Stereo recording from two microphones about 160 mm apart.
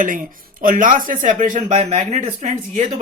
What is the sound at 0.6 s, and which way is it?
Speech, 55° right (ahead or behind).